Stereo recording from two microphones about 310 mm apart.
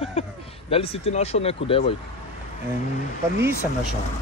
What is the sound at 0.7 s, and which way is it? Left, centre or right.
Speech, centre.